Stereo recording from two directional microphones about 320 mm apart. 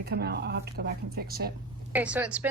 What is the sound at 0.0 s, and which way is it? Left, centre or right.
Speech, right.